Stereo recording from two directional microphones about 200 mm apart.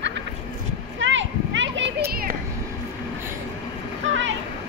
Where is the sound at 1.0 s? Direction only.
70° right (ahead or behind).